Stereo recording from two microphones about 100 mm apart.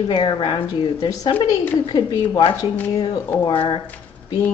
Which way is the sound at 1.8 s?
45° left (ahead or behind).